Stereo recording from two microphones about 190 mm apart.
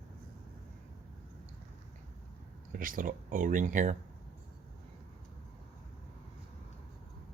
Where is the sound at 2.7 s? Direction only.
45° right (ahead or behind).